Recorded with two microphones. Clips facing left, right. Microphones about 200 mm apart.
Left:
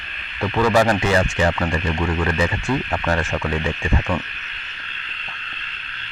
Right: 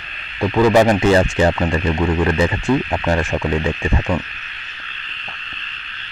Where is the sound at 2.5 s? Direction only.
15° right (ahead or behind).